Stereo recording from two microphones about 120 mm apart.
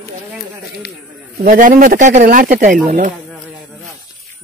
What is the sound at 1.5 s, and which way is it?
Speech, 90° right.